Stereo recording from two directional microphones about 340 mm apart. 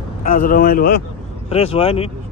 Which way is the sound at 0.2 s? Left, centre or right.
Left.